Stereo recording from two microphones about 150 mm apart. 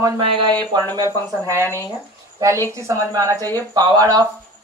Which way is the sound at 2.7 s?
20° right (ahead or behind).